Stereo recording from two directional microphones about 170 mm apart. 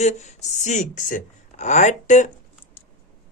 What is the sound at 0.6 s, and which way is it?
Speech, 45° left (ahead or behind).